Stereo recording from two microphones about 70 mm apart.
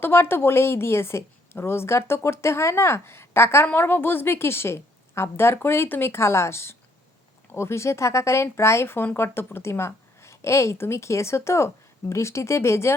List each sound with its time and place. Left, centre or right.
0.0 s a woman's voice: left